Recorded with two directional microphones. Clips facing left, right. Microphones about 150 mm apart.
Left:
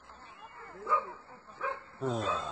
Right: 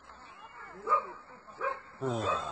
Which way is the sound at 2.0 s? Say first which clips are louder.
Even; centre (ahead or behind).